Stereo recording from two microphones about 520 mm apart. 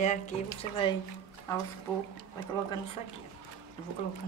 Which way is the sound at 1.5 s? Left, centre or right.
Centre.